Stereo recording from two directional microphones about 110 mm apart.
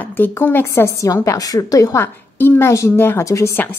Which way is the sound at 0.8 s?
30° left (ahead or behind).